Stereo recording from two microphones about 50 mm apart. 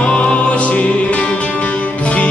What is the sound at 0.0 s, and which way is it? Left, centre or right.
Music, centre.